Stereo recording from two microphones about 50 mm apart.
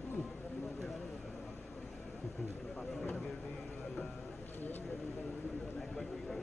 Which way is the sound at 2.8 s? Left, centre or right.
Centre.